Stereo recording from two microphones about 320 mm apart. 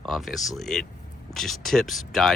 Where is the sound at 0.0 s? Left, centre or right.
Centre.